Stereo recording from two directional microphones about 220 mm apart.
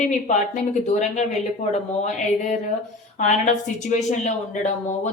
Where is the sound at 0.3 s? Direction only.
30° left (ahead or behind).